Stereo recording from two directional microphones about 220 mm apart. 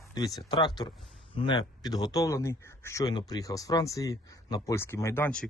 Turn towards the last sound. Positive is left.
turn(degrees=5)  # may be behind; listen again after turning